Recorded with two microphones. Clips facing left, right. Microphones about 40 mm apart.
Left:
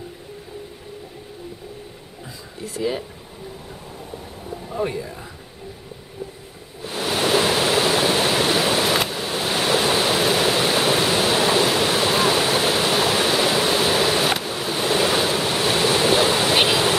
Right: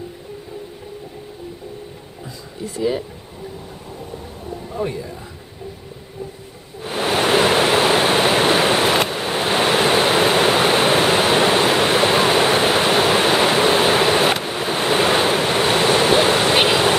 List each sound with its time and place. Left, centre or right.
2.6 s speech: centre
4.6 s speech: centre
6.8 s ocean: right
9.1 s waves: right